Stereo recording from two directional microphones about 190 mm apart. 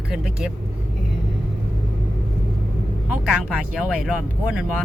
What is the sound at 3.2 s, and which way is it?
Speech, 5° right (ahead or behind).